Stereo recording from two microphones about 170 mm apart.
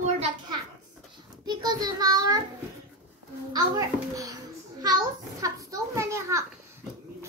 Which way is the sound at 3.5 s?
20° right (ahead or behind).